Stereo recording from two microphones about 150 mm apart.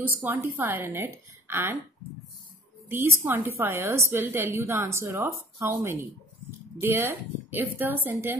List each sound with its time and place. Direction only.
0.2 s a woman's voice: 15° right (ahead or behind)
2.9 s a woman's voice: 15° right (ahead or behind)